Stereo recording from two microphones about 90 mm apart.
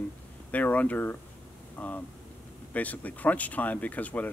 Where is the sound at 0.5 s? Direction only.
20° left (ahead or behind).